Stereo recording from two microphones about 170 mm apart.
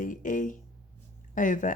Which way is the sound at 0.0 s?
50° left (ahead or behind).